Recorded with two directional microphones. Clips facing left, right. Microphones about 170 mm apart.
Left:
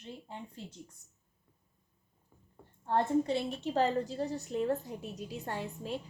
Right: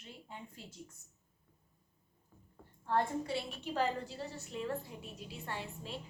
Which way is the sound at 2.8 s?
25° left (ahead or behind).